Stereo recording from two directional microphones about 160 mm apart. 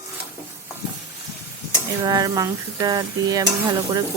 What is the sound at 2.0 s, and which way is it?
Speech, 25° right (ahead or behind).